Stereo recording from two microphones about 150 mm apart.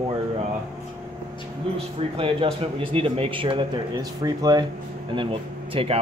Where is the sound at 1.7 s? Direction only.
35° right (ahead or behind).